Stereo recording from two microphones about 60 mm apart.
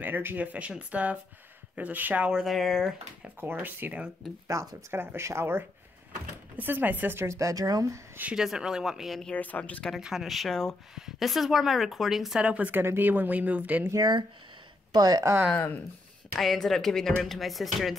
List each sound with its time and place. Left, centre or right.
0.0 s speech: right
2.4 s speech: centre
3.3 s speech: right
4.5 s speech: right
4.9 s speech: right
6.5 s speech: right
7.2 s speech: right
8.4 s speech: centre
9.3 s speech: left
9.9 s speech: centre
11.0 s speech: centre
12.4 s speech: right
15.0 s speech: right
16.3 s speech: centre